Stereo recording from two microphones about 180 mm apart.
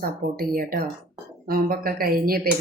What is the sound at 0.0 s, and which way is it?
Speech, 55° right (ahead or behind).